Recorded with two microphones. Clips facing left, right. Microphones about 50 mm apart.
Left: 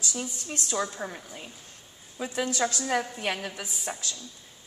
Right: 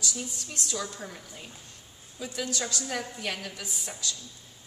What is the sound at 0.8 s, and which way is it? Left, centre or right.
A woman's voice, left.